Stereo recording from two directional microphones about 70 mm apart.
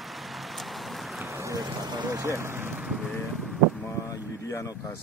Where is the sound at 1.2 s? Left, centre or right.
Right.